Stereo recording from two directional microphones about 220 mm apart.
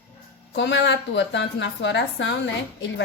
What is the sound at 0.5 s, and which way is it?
A woman's voice, 55° left (ahead or behind).